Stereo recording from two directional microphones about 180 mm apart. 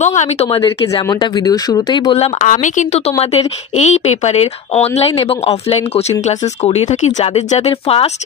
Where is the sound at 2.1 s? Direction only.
40° left (ahead or behind).